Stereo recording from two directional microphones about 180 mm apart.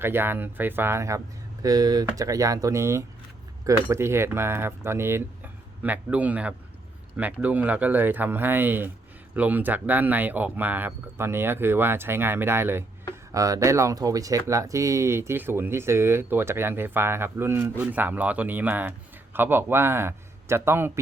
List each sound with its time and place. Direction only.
0.0 s speech: 10° right (ahead or behind)